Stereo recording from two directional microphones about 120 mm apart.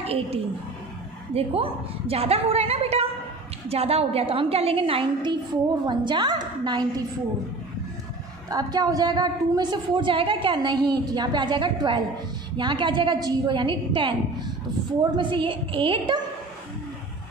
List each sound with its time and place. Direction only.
0.0 s a woman's voice: 55° right (ahead or behind); by 6.9 s 35° right (ahead or behind)
8.5 s a woman's voice: 35° right (ahead or behind)